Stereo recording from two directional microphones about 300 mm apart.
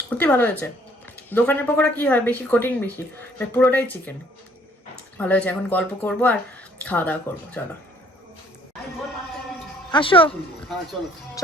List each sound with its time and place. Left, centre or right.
0.1 s speech: centre
5.1 s speech: centre
9.9 s speech: centre